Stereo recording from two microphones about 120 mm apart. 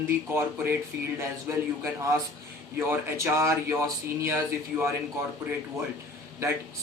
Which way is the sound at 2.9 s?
20° right (ahead or behind).